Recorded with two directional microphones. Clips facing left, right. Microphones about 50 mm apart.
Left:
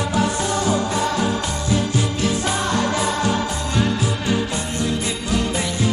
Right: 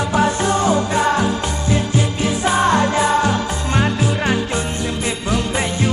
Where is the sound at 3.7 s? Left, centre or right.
Right.